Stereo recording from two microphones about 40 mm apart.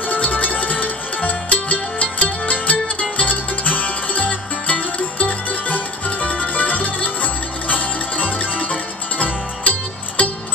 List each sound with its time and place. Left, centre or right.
0.0 s music: left